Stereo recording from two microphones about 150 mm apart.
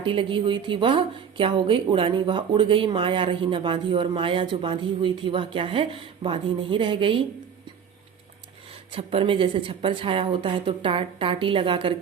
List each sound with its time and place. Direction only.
0.0 s a woman's voice: 35° right (ahead or behind)
8.9 s a woman's voice: 40° right (ahead or behind)